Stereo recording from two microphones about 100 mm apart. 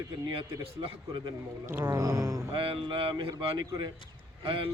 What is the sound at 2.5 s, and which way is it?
A man's voice, 60° right (ahead or behind).